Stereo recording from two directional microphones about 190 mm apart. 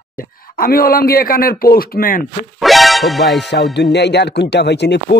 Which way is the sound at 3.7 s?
65° left (ahead or behind).